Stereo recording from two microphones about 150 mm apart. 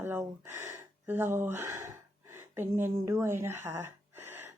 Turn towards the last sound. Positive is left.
turn(degrees=-15)  # may be behind; listen again after turning